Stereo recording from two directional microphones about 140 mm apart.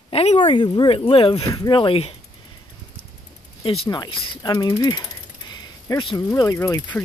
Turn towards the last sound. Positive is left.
turn(degrees=20)  # may be behind; listen again after turning